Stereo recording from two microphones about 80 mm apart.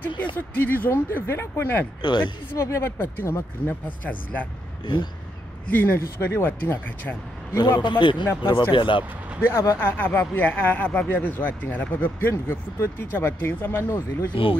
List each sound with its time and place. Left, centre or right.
0.4 s speech: left
2.0 s a man's voice: left
2.5 s speech: left; by 4.5 s centre
5.7 s speech: left
7.5 s a man's voice: left
8.4 s speech: left
9.5 s speech: left
14.3 s speech: left